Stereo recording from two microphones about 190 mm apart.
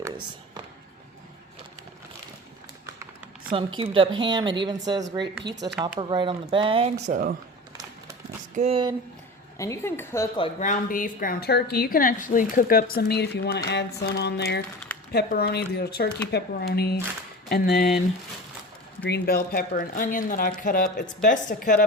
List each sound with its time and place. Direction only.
3.5 s speech: 30° right (ahead or behind)
7.0 s speech: 45° right (ahead or behind)
8.5 s speech: 30° right (ahead or behind)
9.6 s a woman's voice: 15° left (ahead or behind)
10.6 s a woman's voice: 45° left (ahead or behind)
19.0 s a woman's voice: 60° left (ahead or behind)